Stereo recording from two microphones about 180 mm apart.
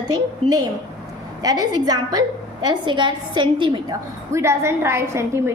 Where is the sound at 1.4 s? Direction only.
20° right (ahead or behind).